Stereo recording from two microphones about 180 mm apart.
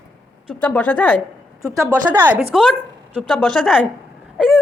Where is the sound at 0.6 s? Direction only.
5° left (ahead or behind).